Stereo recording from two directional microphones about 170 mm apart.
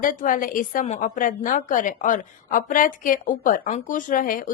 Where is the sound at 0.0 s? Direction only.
55° left (ahead or behind).